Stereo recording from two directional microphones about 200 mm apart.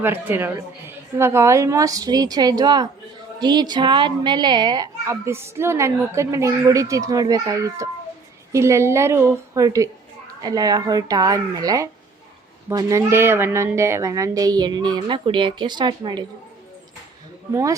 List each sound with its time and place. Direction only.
0.0 s a child's voice: 10° right (ahead or behind)
17.5 s a child's voice: 15° right (ahead or behind)